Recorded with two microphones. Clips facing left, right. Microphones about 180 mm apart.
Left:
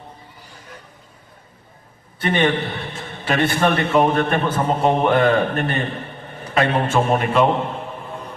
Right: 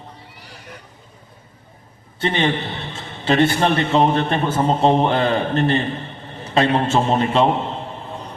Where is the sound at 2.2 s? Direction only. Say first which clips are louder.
Left 1 dB; 25° right (ahead or behind).